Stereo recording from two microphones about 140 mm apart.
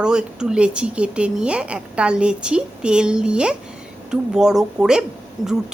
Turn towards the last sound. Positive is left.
turn(degrees=0)  # may be behind; listen again after turning